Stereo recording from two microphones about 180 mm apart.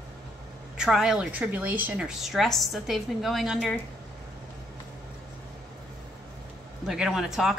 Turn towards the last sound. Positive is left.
turn(degrees=0)  # may be behind; listen again after turning